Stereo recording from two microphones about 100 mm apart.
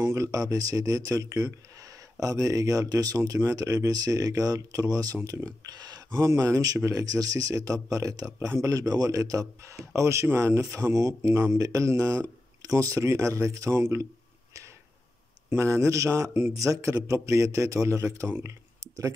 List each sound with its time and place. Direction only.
0.0 s speech: 30° right (ahead or behind)
15.5 s speech: 30° right (ahead or behind)